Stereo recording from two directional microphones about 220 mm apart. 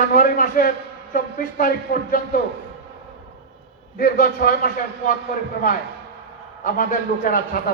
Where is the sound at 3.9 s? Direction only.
40° left (ahead or behind).